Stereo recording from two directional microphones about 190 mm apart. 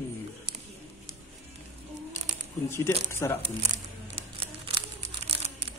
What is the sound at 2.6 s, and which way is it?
Speech, 15° left (ahead or behind).